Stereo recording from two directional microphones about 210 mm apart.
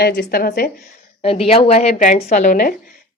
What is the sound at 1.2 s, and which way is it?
A woman's voice, 25° left (ahead or behind).